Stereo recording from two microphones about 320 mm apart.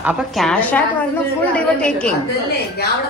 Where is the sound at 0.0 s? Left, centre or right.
Centre.